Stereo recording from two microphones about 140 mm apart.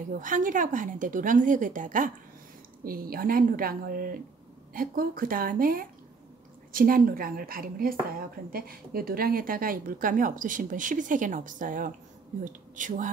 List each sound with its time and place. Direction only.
0.1 s speech: 70° right (ahead or behind)
2.8 s speech: 90° right; by 13.1 s 65° right (ahead or behind)